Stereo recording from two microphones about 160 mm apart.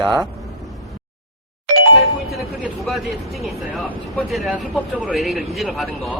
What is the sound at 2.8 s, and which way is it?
Speech, centre (ahead or behind).